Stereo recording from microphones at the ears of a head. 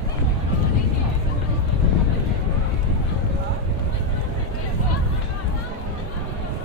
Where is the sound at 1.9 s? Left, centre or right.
Left.